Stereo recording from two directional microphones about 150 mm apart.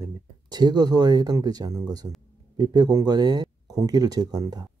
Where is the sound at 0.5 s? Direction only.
25° right (ahead or behind).